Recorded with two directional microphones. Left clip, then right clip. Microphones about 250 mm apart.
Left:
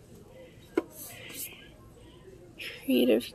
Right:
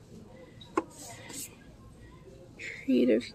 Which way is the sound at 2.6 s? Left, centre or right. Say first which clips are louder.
Left 1 dB; centre.